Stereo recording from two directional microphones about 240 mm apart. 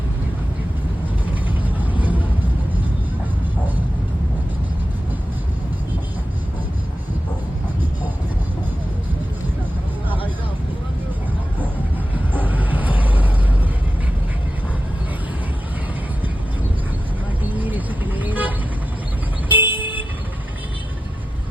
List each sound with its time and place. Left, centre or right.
1.5 s vehicle: centre
12.3 s vehicle: centre
17.6 s vehicle: centre